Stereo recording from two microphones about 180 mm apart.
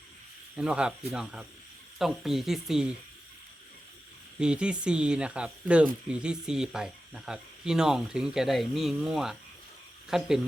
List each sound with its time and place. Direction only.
0.5 s speech: 5° right (ahead or behind)
4.4 s speech: 5° right (ahead or behind)